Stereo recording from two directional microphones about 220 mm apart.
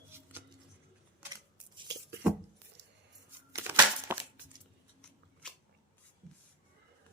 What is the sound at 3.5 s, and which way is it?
Crumpling, 10° right (ahead or behind).